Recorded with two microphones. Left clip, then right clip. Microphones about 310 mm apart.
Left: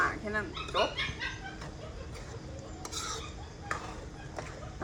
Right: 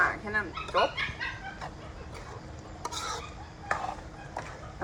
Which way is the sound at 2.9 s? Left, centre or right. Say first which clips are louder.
Right 2 dB; centre.